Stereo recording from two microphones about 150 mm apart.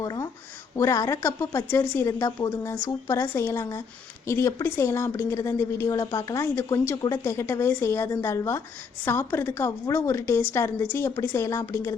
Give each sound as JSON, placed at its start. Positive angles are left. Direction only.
{"t": 0.0, "sound": "a woman's voice", "side_deg": 25}